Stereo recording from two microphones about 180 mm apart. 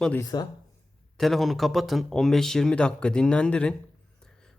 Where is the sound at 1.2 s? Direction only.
Centre (ahead or behind).